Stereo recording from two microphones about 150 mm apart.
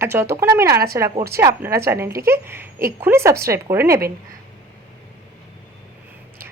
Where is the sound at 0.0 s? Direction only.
15° right (ahead or behind).